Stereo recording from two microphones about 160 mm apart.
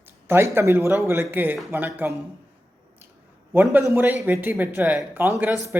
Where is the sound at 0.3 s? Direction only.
15° right (ahead or behind).